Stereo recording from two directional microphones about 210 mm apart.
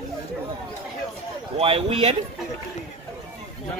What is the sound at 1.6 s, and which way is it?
Speech, 25° right (ahead or behind).